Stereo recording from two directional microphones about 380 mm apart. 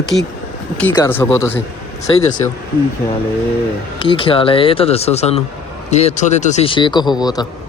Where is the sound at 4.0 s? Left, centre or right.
Centre.